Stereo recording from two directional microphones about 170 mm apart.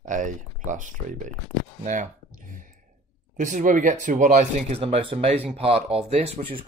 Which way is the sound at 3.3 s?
50° right (ahead or behind).